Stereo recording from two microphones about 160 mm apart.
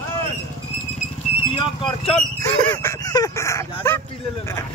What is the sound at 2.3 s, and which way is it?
Speech, 15° left (ahead or behind).